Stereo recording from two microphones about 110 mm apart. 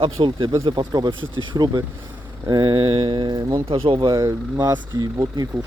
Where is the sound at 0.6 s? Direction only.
40° right (ahead or behind).